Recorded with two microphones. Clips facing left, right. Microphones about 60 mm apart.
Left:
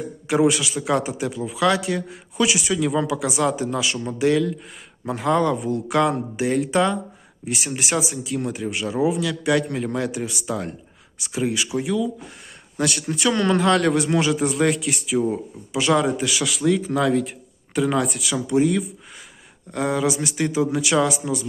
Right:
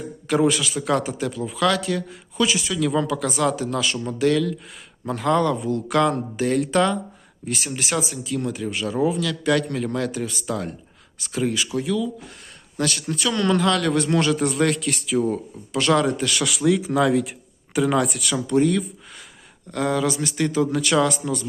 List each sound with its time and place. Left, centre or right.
0.3 s a man's voice: centre
8.1 s a man's voice: left
14.0 s a man's voice: centre